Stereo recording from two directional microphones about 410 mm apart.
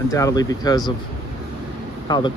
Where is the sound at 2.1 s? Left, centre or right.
Centre.